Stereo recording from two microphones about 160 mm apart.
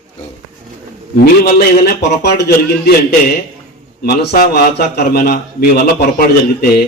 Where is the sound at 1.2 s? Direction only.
75° left (ahead or behind).